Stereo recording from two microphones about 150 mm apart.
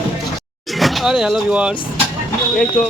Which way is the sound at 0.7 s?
Centre (ahead or behind).